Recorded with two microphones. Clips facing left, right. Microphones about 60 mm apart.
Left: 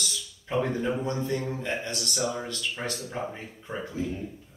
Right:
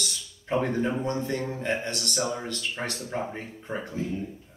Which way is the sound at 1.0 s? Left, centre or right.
Right.